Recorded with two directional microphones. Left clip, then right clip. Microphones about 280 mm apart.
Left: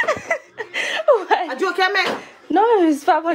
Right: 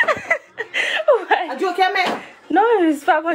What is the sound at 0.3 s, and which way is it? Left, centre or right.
Chuckle, left.